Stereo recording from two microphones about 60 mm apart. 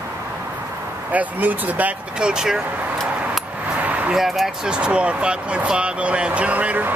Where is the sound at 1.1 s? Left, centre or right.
Right.